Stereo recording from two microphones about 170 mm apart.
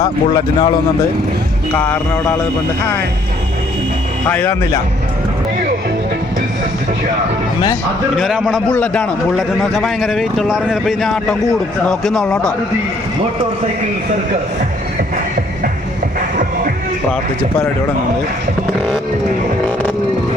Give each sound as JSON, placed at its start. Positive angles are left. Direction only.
{"t": 0.0, "sound": "speech", "side_deg": 25}
{"t": 1.7, "sound": "a man's voice", "side_deg": 10}
{"t": 4.3, "sound": "a man's voice", "side_deg": 10}
{"t": 8.1, "sound": "speech", "side_deg": 0}
{"t": 8.7, "sound": "a man's voice", "side_deg": 5}